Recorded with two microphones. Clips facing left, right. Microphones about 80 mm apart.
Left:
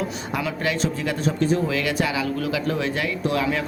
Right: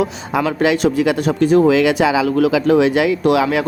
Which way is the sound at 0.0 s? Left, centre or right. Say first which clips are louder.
Right 8 dB; right.